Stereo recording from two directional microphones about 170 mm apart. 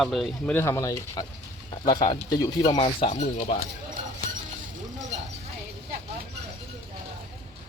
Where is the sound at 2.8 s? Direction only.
35° left (ahead or behind).